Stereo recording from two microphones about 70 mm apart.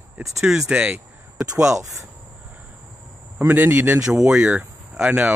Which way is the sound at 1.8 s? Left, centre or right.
Right.